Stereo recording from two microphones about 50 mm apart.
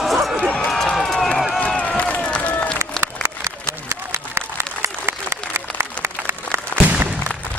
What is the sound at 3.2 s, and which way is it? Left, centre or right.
Applause, right.